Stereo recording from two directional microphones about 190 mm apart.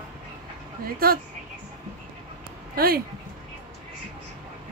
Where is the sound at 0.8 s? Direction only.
50° right (ahead or behind).